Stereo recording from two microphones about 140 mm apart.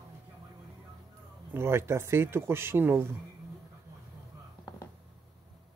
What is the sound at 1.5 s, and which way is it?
Speech, 20° right (ahead or behind).